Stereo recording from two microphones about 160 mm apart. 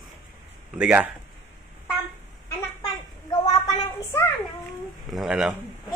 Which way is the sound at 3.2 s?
20° left (ahead or behind).